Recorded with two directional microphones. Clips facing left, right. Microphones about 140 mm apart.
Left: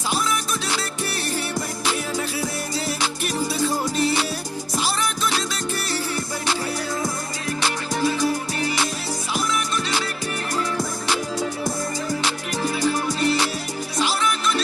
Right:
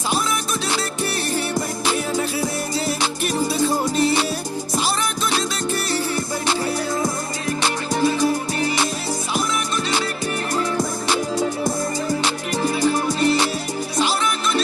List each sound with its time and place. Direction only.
0.1 s music: 25° right (ahead or behind)
7.6 s music: 25° right (ahead or behind)
10.5 s music: 25° right (ahead or behind)